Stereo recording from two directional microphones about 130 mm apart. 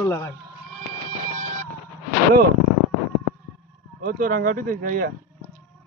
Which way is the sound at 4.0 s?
90° right.